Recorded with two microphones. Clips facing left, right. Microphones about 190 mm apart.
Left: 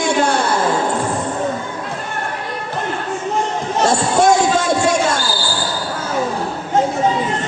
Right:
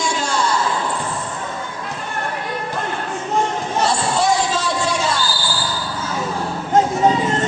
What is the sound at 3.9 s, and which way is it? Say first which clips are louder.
Music: left 6 dB; 50° left (ahead or behind).